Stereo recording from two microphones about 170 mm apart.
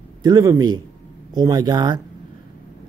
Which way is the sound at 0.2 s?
20° right (ahead or behind).